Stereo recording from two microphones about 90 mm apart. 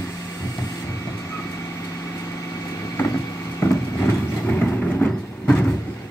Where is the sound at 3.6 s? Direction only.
30° left (ahead or behind).